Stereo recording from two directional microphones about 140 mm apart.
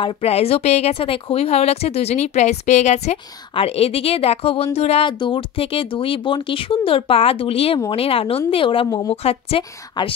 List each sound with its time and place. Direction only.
0.0 s a woman's voice: 45° left (ahead or behind)